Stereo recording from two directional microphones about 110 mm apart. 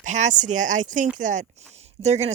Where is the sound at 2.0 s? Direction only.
90° right.